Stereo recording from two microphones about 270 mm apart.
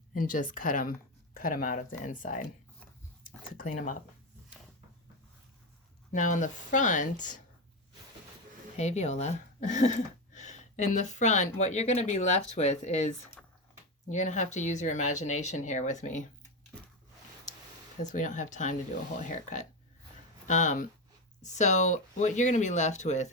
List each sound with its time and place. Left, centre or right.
0.1 s speech: left
3.6 s speech: left
6.1 s speech: left
8.7 s speech: left
13.4 s squish: centre
14.1 s speech: left
18.0 s speech: left
20.5 s speech: left